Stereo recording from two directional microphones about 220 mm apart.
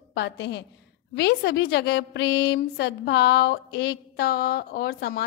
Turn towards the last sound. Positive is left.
turn(degrees=45)  # may be behind; listen again after turning